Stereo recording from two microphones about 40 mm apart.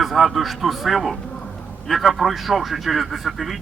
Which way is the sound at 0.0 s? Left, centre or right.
Centre.